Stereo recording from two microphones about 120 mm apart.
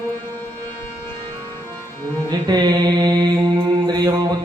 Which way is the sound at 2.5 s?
35° right (ahead or behind).